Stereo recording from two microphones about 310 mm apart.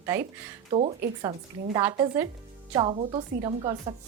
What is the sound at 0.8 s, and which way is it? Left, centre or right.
Speech, centre.